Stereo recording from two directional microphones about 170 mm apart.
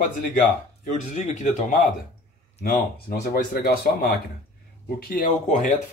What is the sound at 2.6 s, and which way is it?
Speech, 65° left (ahead or behind).